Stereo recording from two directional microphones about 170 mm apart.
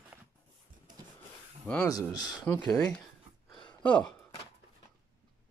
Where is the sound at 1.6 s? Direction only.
5° left (ahead or behind).